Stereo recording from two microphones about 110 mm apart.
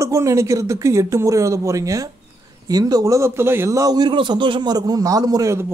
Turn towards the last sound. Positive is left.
turn(degrees=-30)  # may be behind; listen again after turning